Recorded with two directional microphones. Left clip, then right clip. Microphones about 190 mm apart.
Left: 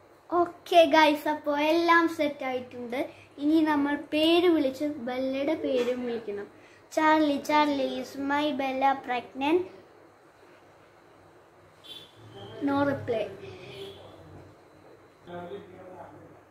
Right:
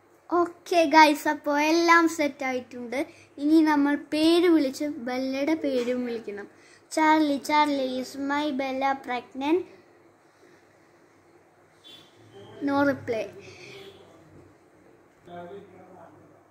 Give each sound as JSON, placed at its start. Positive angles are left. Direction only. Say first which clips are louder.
{"t": 0.3, "sound": "a child's voice", "louder": "even", "side_deg": -45}
{"t": 6.9, "sound": "child singing", "louder": "right 1 dB", "side_deg": -45}
{"t": 12.6, "sound": "a woman's voice", "louder": "right 2 dB", "side_deg": -55}